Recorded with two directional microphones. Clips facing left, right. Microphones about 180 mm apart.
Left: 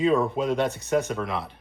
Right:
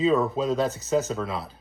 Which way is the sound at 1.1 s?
25° right (ahead or behind).